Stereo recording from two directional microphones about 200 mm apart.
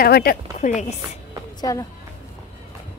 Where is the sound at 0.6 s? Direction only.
35° left (ahead or behind).